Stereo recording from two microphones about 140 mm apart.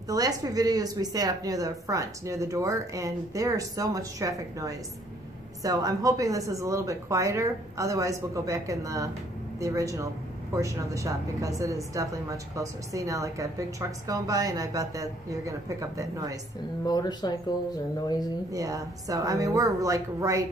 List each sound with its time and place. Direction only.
0.1 s a woman's voice: 25° right (ahead or behind)
16.8 s speech: 30° left (ahead or behind)
18.5 s a woman's voice: 25° right (ahead or behind)